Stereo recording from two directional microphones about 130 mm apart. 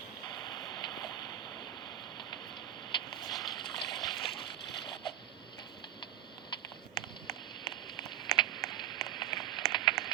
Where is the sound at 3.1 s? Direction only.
30° left (ahead or behind).